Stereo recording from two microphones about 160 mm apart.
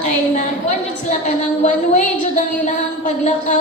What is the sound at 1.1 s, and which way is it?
A woman's voice, 50° left (ahead or behind).